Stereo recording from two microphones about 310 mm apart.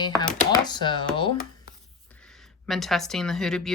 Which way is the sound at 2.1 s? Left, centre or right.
Centre.